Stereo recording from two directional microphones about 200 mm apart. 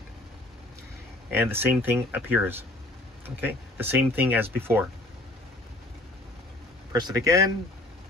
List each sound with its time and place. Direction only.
1.4 s speech: 10° right (ahead or behind)
6.9 s speech: 15° right (ahead or behind)